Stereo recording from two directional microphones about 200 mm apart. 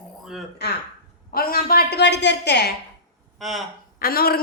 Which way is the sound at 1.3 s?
45° left (ahead or behind).